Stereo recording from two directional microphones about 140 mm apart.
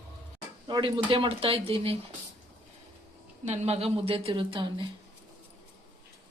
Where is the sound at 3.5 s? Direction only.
50° right (ahead or behind).